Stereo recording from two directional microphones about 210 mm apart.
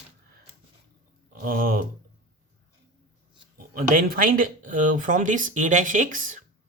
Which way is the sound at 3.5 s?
40° right (ahead or behind).